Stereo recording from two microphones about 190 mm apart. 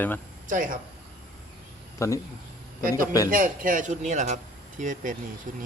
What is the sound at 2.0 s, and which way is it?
Speech, 15° left (ahead or behind).